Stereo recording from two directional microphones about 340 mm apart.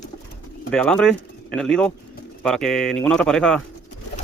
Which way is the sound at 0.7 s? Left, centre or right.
Centre.